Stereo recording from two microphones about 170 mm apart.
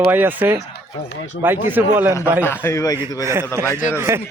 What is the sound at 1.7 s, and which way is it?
Speech, 10° right (ahead or behind).